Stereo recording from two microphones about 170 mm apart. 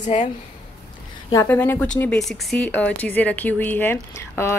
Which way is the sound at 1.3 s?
10° left (ahead or behind).